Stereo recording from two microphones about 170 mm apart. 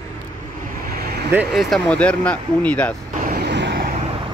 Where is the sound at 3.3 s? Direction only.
80° right.